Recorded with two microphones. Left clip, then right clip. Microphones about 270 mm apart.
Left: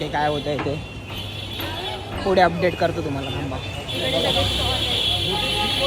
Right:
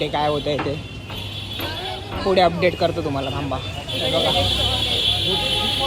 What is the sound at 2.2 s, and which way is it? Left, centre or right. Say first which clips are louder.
Speech: right 1 dB; centre.